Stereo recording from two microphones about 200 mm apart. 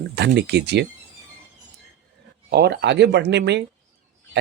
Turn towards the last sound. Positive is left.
turn(degrees=-60)  # may be behind; listen again after turning